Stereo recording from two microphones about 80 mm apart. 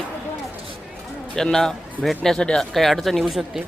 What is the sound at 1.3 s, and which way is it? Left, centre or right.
Speech, centre.